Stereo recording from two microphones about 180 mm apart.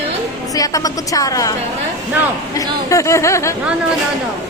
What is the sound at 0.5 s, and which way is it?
Speech, 20° left (ahead or behind).